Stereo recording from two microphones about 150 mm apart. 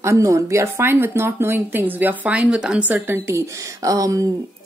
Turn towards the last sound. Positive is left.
turn(degrees=-20)  # may be behind; listen again after turning